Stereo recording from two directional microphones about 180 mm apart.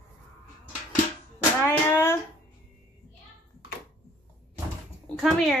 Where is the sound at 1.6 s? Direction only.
15° left (ahead or behind).